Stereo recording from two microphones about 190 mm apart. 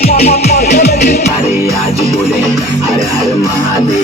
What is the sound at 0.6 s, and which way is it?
Music, 55° left (ahead or behind).